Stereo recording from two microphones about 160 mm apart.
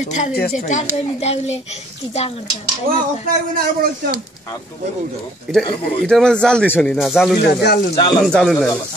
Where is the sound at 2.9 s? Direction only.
65° right (ahead or behind).